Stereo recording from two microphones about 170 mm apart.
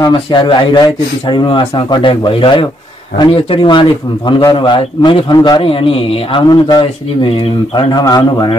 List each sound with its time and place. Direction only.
0.0 s speech: 25° left (ahead or behind)